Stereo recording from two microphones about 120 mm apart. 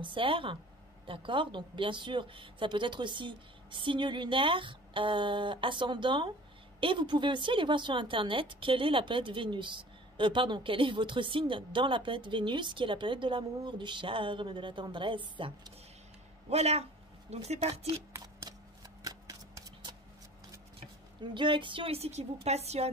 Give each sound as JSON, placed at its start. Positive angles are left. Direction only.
{"t": 0.0, "sound": "a woman's voice", "side_deg": -45}
{"t": 16.4, "sound": "speech", "side_deg": -65}
{"t": 18.1, "sound": "a sound", "side_deg": -25}
{"t": 19.0, "sound": "shuffling cards", "side_deg": -30}
{"t": 21.2, "sound": "a woman's voice", "side_deg": -40}